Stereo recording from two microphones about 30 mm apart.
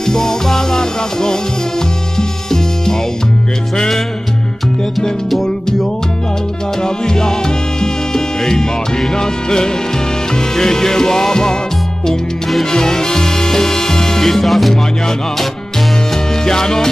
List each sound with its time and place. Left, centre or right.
0.0 s music: centre
6.8 s music: left
12.7 s music: left; by 14.8 s centre
16.4 s music: centre